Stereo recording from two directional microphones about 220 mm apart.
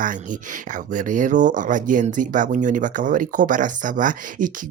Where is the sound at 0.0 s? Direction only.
35° right (ahead or behind).